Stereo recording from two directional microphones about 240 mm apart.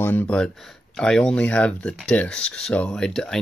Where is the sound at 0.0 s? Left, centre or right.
Centre.